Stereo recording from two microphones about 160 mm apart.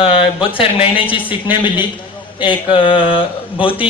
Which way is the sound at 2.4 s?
30° left (ahead or behind).